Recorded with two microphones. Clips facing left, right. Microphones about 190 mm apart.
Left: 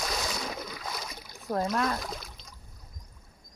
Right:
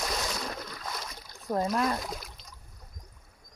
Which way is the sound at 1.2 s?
15° left (ahead or behind).